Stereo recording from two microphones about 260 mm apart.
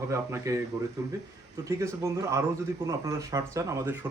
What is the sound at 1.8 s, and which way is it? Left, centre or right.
A man's voice, centre.